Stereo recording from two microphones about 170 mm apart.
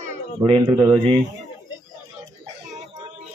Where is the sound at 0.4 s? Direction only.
25° right (ahead or behind).